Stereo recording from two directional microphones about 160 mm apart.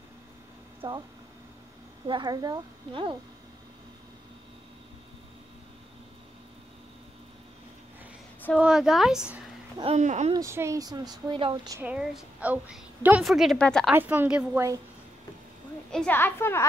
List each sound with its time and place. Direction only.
0.8 s a woman's voice: 20° right (ahead or behind)
2.0 s speech: 25° right (ahead or behind)
8.5 s a woman's voice: 5° right (ahead or behind)
9.9 s speech: 45° right (ahead or behind)
10.3 s speech: 20° right (ahead or behind)
11.8 s a woman's voice: 5° right (ahead or behind)
13.9 s a woman's voice: 10° right (ahead or behind)
15.9 s a woman's voice: 10° left (ahead or behind)